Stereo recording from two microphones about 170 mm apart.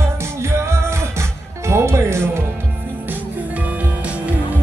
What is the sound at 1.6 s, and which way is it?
Music, 15° right (ahead or behind).